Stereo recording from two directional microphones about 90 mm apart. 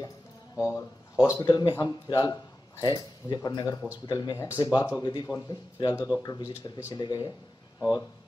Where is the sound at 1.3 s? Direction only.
50° left (ahead or behind).